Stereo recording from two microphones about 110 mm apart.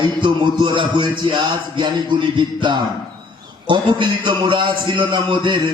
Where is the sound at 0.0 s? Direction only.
45° right (ahead or behind).